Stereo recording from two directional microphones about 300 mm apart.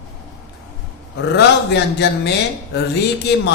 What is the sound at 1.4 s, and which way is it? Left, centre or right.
Speech, left.